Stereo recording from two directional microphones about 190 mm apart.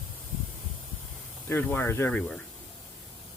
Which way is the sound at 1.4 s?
10° left (ahead or behind).